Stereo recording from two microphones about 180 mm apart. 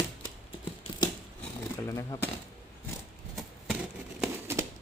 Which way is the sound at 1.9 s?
15° left (ahead or behind).